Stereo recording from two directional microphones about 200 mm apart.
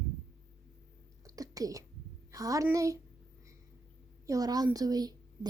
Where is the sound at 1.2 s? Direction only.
15° right (ahead or behind).